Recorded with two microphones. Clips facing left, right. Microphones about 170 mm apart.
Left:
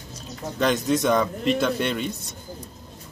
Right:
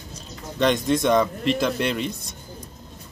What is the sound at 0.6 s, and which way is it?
A man's voice, 5° left (ahead or behind).